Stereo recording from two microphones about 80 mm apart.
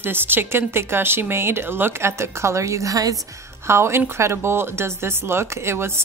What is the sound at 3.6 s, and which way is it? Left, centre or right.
A woman's voice, right.